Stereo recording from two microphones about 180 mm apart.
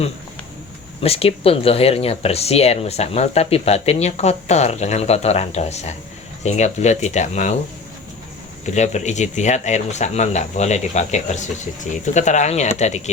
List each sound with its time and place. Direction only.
1.0 s speech: 35° left (ahead or behind)
8.6 s speech: 40° left (ahead or behind)